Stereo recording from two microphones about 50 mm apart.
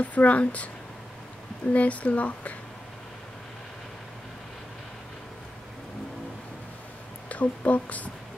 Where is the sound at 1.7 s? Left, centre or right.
Left.